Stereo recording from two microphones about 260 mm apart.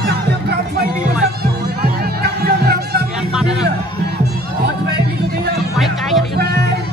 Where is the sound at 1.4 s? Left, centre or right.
Right.